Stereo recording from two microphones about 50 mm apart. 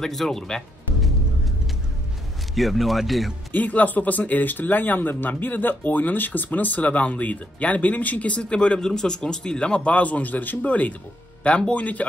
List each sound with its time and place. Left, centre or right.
0.0 s music: centre
2.5 s a man's voice: centre
3.5 s speech: left